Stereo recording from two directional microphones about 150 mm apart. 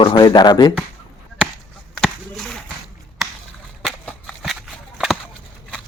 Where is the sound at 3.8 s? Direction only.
Centre (ahead or behind).